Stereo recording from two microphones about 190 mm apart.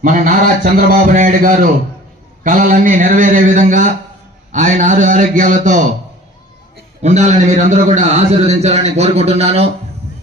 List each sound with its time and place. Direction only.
0.0 s a man's voice: 45° right (ahead or behind)
7.0 s a man's voice: 35° right (ahead or behind)